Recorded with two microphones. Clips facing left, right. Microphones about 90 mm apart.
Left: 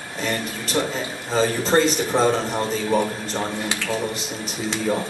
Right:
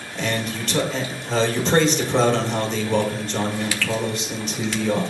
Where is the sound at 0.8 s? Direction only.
10° left (ahead or behind).